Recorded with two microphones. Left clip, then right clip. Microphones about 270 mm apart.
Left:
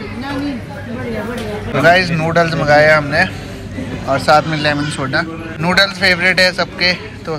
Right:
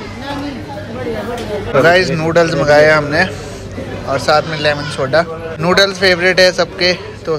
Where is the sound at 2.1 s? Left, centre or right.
Centre.